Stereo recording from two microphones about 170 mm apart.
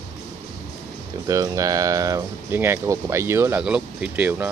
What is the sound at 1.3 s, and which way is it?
Speech, 20° right (ahead or behind).